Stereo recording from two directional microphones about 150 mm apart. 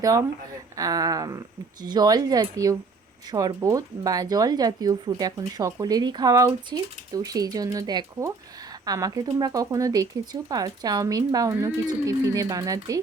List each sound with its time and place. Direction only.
0.0 s speech: 25° right (ahead or behind)